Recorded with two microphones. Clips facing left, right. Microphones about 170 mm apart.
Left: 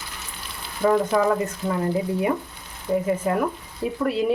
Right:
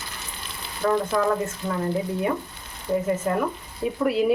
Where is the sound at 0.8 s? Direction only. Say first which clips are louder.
Left 3 dB; 15° left (ahead or behind).